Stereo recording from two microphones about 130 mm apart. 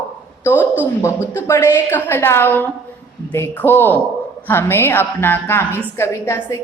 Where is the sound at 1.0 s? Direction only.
20° left (ahead or behind).